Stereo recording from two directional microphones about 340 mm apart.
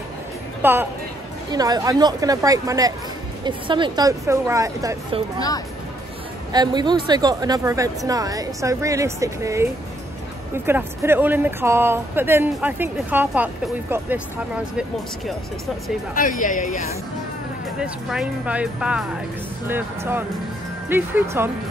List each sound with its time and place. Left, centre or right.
0.6 s speech: centre
6.5 s speech: centre
16.2 s speech: left
17.7 s speech: centre